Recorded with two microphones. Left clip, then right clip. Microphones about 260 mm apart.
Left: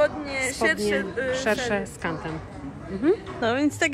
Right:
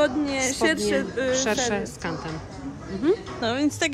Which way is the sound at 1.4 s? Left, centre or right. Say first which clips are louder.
Even; centre.